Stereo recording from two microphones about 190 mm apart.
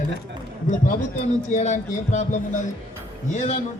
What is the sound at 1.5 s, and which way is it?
A man's voice, 40° left (ahead or behind).